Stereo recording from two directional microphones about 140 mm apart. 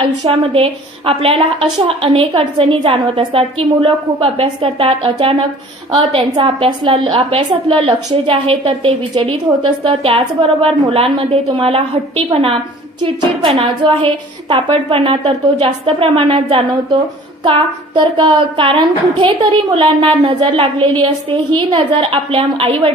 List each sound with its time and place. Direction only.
0.0 s a woman's voice: 40° right (ahead or behind)